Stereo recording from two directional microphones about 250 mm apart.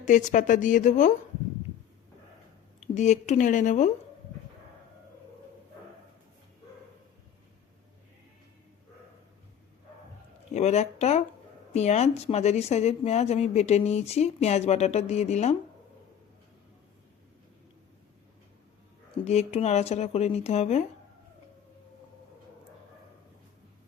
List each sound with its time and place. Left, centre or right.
0.0 s a woman's voice: left
2.8 s speech: left
10.5 s speech: left
19.2 s speech: left